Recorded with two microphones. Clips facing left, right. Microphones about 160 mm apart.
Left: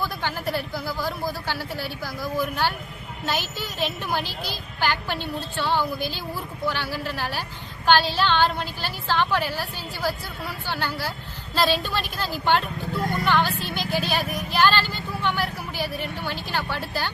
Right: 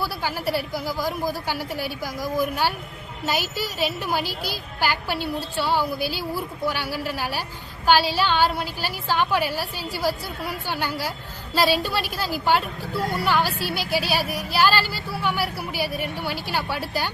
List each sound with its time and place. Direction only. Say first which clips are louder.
0.0 s a woman's voice: right 1 dB; 10° right (ahead or behind)